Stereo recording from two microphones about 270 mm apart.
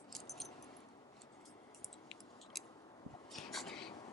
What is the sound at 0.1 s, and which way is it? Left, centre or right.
Keys jangling, centre.